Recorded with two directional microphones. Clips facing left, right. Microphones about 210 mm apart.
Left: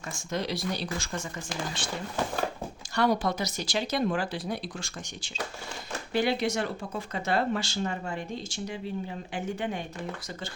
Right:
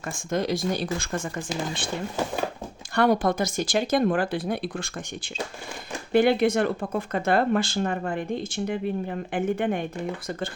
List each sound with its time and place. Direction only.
0.1 s speech: 50° right (ahead or behind)
2.9 s speech: 55° right (ahead or behind)